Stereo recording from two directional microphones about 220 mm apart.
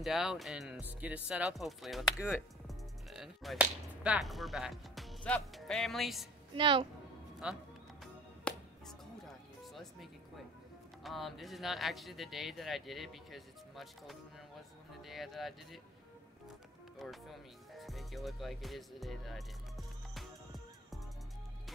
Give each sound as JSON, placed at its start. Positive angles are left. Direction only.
{"t": 0.0, "sound": "speech", "side_deg": 0}
{"t": 6.5, "sound": "a woman's voice", "side_deg": -25}
{"t": 7.4, "sound": "speech", "side_deg": -5}
{"t": 8.0, "sound": "music", "side_deg": 0}
{"t": 11.1, "sound": "speech", "side_deg": 0}
{"t": 17.0, "sound": "speech", "side_deg": 0}